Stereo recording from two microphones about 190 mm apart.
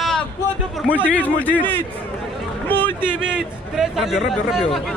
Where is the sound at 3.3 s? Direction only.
Centre (ahead or behind).